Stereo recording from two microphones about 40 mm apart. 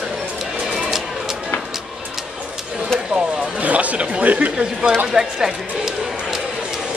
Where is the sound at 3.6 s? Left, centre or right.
Right.